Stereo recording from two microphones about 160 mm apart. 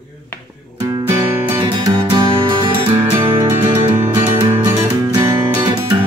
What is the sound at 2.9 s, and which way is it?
Music, 15° right (ahead or behind).